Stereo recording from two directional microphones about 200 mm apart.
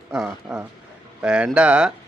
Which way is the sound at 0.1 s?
5° right (ahead or behind).